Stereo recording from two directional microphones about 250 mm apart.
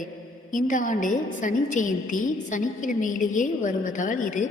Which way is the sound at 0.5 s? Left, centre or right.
Left.